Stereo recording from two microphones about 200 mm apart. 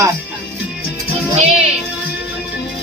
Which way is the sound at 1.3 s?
30° right (ahead or behind).